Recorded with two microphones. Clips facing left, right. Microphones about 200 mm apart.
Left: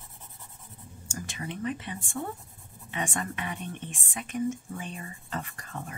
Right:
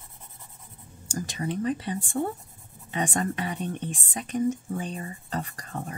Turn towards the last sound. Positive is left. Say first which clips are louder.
# right 4 dB
turn(degrees=-35)  # may be behind; listen again after turning